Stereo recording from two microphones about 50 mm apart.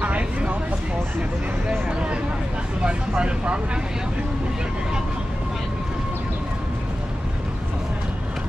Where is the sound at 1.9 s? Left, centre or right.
Right.